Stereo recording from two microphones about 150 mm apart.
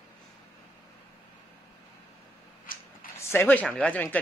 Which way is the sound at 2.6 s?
70° left (ahead or behind).